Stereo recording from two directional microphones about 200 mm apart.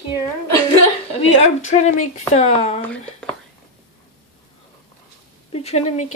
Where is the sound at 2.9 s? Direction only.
5° left (ahead or behind).